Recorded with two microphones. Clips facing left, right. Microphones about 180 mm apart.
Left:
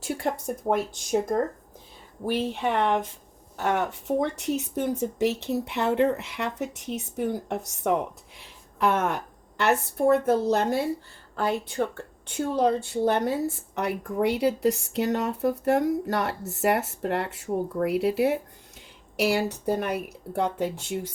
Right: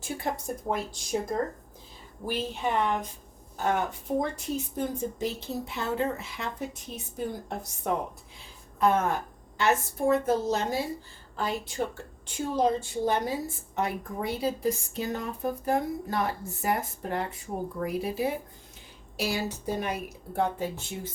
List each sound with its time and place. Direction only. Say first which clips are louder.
0.0 s a woman's voice: left 4 dB; 70° left (ahead or behind)
2.2 s a woman's voice: left 4 dB; 65° left (ahead or behind)